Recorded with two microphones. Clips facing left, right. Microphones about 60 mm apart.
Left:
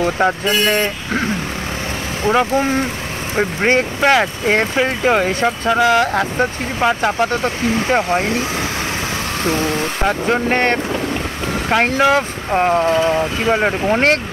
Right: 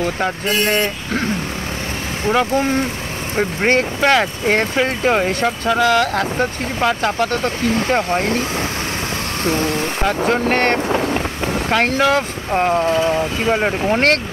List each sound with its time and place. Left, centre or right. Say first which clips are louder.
0.5 s speech: left 1 dB; left
2.2 s speech: left 1 dB; centre
10.9 s boat: right 2 dB; centre
11.7 s speech: left 2 dB; centre